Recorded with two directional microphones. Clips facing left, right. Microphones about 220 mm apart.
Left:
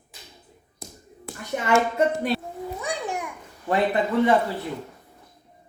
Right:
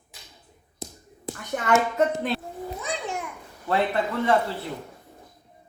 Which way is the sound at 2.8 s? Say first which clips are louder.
Left 2 dB; 15° left (ahead or behind).